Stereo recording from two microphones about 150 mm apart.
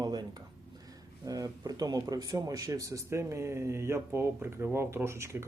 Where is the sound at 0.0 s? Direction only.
25° right (ahead or behind).